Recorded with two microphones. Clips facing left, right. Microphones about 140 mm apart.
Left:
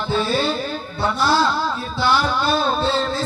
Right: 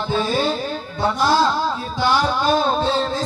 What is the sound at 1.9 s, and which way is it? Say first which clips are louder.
Speech: even; 15° right (ahead or behind).